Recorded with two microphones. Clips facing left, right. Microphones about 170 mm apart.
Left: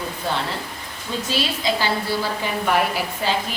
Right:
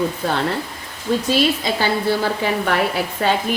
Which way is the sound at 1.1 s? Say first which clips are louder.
Right 8 dB; 60° right (ahead or behind).